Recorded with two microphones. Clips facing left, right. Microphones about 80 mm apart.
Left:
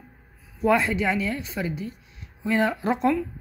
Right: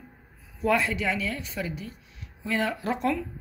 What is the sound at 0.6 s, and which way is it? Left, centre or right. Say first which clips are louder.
A woman's voice: left 4 dB; left.